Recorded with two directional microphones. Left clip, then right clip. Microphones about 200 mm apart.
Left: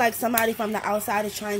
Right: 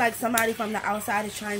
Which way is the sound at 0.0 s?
40° left (ahead or behind).